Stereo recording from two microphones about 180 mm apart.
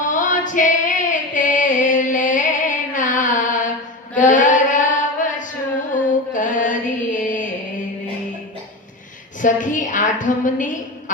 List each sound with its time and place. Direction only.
0.1 s female singing: 45° left (ahead or behind)
4.1 s mantra: 45° left (ahead or behind)
5.9 s music: 45° left (ahead or behind)
9.4 s a woman's voice: 45° left (ahead or behind)